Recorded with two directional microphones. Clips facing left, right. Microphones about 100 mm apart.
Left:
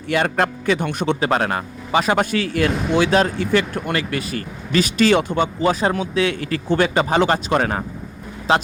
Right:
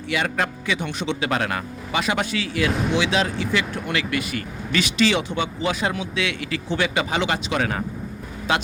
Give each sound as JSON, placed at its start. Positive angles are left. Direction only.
{"t": 0.1, "sound": "a man's voice", "side_deg": 50}
{"t": 4.1, "sound": "speech", "side_deg": 35}